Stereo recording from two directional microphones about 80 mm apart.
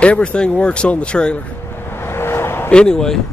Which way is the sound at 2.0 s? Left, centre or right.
Left.